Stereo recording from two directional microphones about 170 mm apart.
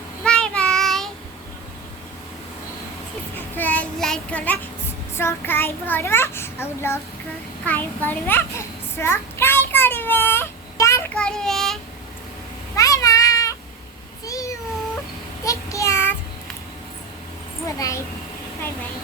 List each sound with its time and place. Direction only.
0.3 s child singing: 5° left (ahead or behind)
3.3 s child singing: 10° left (ahead or behind)
5.1 s a child's voice: 15° left (ahead or behind)
7.6 s a sound: 10° left (ahead or behind)
11.1 s child singing: 5° left (ahead or behind)
12.7 s cat: 20° left (ahead or behind)
14.3 s a sound: 20° left (ahead or behind)
15.4 s child singing: 20° left (ahead or behind)
17.7 s a child's voice: 20° left (ahead or behind)